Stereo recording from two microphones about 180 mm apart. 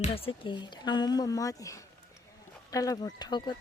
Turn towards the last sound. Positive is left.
turn(degrees=25)  # may be behind; listen again after turning